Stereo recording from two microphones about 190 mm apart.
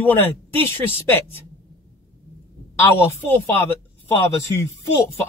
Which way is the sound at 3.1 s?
10° left (ahead or behind).